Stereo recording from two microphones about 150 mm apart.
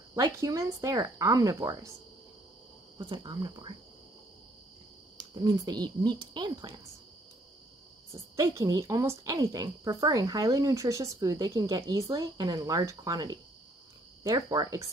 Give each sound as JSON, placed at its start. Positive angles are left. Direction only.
{"t": 0.1, "sound": "a woman's voice", "side_deg": -20}
{"t": 3.0, "sound": "a woman's voice", "side_deg": -30}
{"t": 5.3, "sound": "a woman's voice", "side_deg": -25}
{"t": 8.1, "sound": "a woman's voice", "side_deg": -20}